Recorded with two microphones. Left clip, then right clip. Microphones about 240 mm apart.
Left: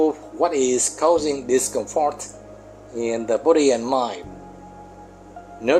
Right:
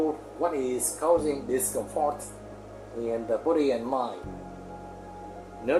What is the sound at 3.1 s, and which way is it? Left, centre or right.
Speech, left.